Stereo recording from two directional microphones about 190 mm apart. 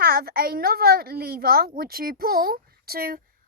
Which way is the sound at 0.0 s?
55° right (ahead or behind).